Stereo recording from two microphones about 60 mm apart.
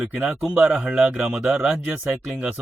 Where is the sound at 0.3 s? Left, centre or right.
Centre.